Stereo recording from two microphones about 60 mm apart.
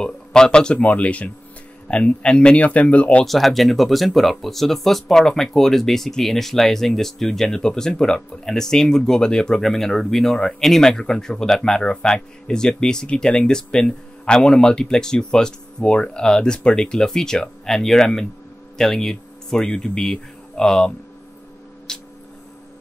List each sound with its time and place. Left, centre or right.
0.0 s speech: centre
3.3 s speech: centre
21.9 s a sound: centre